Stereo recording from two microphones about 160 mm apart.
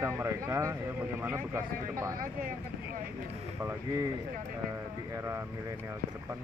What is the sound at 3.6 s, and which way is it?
Speech, 15° right (ahead or behind).